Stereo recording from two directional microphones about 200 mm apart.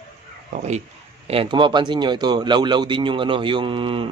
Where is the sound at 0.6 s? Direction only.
35° right (ahead or behind).